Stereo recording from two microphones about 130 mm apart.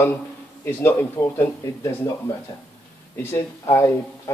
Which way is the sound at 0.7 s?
15° left (ahead or behind).